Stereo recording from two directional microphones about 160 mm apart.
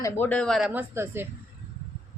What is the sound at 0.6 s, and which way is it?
Speech, 10° right (ahead or behind).